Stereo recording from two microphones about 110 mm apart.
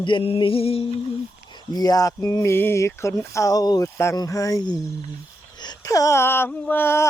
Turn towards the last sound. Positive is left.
turn(degrees=20)  # may be behind; listen again after turning